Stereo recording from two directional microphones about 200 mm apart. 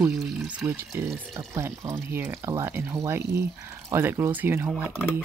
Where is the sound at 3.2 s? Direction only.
55° right (ahead or behind).